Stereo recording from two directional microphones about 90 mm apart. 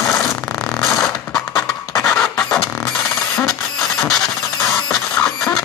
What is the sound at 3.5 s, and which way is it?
Mechanisms, 5° left (ahead or behind).